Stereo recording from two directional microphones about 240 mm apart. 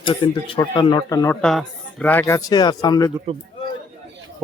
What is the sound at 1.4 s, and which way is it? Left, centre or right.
Speech, centre.